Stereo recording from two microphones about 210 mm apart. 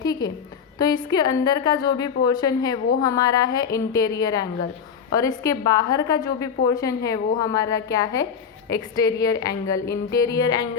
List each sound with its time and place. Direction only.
0.0 s a woman's voice: 20° left (ahead or behind)